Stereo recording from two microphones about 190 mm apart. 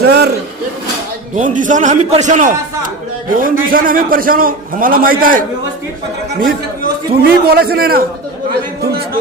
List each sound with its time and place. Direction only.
0.0 s a sound: 60° right (ahead or behind)
1.4 s a man's voice: 45° right (ahead or behind)
7.1 s a man's voice: 55° right (ahead or behind)